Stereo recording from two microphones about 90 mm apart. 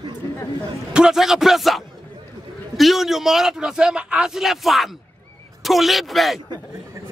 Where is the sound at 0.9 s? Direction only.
5° right (ahead or behind).